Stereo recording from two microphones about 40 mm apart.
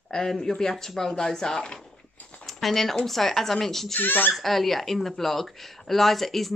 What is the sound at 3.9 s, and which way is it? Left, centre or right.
Speech, left.